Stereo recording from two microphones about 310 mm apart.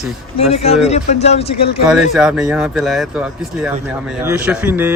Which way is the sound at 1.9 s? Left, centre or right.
Centre.